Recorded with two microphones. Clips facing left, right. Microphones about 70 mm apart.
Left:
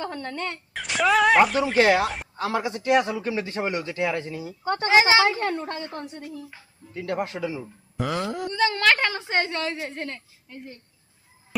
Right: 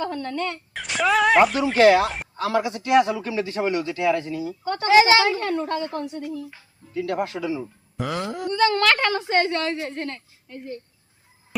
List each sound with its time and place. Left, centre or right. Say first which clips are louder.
0.0 s speech: right 4 dB; left
0.7 s speech: left 1 dB; centre
1.8 s a woman's voice: right 5 dB; centre
7.9 s wail: even; centre
8.5 s a woman's voice: right 2 dB; centre